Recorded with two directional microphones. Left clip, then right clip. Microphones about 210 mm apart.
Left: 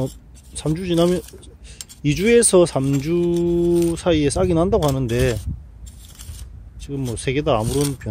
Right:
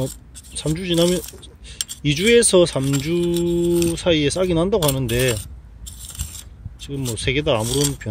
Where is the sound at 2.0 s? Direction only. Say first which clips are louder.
Even; 5° left (ahead or behind).